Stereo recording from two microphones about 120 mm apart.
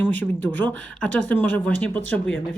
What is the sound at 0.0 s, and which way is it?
Speech, 15° left (ahead or behind).